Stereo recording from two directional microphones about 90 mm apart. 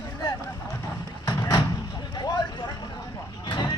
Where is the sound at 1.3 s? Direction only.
40° left (ahead or behind).